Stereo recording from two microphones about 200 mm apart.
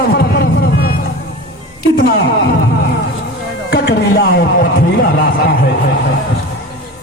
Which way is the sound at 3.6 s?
50° left (ahead or behind).